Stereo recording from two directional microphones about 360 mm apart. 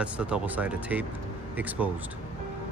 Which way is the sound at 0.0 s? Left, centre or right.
Centre.